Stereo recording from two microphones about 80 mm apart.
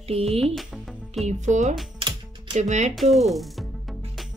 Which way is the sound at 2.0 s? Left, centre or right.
Right.